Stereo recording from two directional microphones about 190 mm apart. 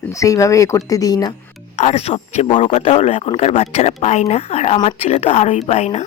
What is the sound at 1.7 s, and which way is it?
A man's voice, 35° left (ahead or behind).